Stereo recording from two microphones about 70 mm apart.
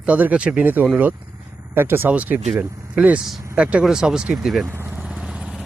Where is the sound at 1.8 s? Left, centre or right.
Right.